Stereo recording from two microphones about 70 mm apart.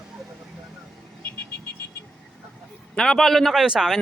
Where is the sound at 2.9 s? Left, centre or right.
Centre.